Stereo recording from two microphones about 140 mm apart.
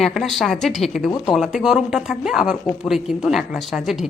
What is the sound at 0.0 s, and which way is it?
A woman's voice, centre (ahead or behind).